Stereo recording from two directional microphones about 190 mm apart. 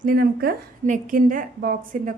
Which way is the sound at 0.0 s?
50° right (ahead or behind).